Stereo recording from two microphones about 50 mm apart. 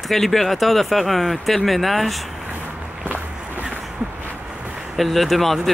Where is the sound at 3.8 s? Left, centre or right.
Centre.